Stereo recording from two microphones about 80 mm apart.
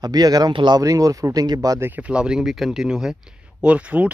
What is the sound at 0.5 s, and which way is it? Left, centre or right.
Speech, right.